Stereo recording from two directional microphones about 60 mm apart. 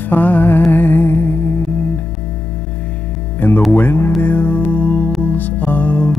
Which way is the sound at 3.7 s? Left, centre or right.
Left.